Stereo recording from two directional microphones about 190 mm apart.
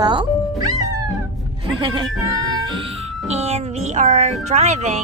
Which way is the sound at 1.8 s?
25° right (ahead or behind).